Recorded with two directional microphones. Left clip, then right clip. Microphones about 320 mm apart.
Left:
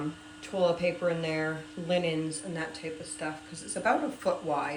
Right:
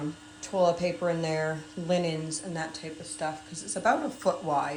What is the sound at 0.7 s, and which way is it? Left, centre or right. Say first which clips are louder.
Speech: even; right.